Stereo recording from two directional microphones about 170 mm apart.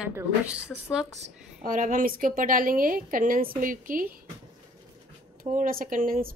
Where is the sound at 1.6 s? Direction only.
55° right (ahead or behind).